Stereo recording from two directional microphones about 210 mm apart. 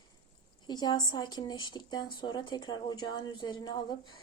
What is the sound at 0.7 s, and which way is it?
A woman's voice, 20° left (ahead or behind).